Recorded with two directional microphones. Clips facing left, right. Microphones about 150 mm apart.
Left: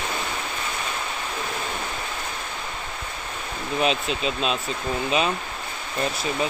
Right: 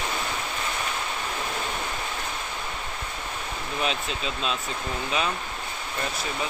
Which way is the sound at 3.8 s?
15° left (ahead or behind).